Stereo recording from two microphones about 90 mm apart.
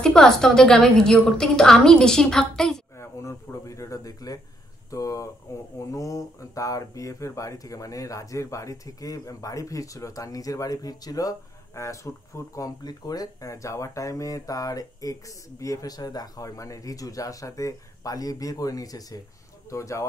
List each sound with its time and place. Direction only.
0.0 s a woman's voice: 5° left (ahead or behind)
3.0 s a sound: 30° left (ahead or behind)
5.8 s speech: 35° left (ahead or behind)